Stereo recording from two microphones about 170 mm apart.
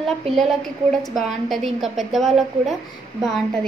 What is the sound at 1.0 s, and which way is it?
A woman's voice, centre (ahead or behind).